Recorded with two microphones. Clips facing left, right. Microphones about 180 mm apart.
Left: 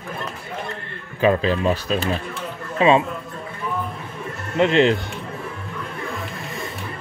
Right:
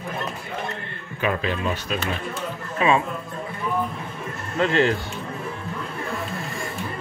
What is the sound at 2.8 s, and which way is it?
Speech, 25° left (ahead or behind).